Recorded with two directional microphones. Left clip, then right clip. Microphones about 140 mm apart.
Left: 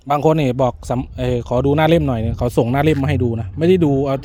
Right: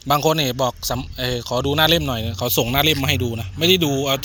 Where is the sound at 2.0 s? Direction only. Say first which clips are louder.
Left 2 dB; 55° left (ahead or behind).